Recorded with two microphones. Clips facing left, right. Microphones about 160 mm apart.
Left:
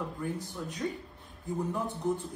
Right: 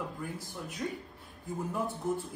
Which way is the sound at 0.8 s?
5° right (ahead or behind).